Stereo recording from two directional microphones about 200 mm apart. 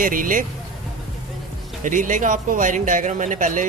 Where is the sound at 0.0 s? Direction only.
45° right (ahead or behind).